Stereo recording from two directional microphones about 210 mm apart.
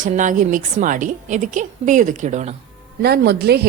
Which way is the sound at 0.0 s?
40° right (ahead or behind).